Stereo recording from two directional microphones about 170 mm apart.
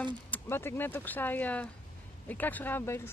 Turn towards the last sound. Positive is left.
turn(degrees=15)  # may be behind; listen again after turning